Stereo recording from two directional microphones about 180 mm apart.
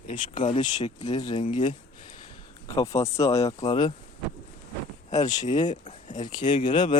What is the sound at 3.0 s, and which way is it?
Speech, 15° left (ahead or behind).